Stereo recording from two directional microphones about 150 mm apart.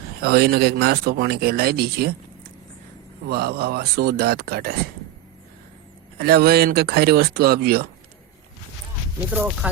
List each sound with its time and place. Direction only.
0.2 s speech: 90° right
3.2 s speech: 90° right
6.1 s speech: 90° right
9.3 s speech: 10° right (ahead or behind)